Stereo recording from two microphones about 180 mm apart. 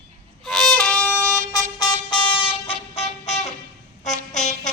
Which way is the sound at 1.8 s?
25° left (ahead or behind).